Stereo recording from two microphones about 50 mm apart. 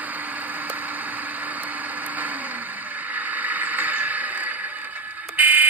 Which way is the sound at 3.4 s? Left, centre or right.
Right.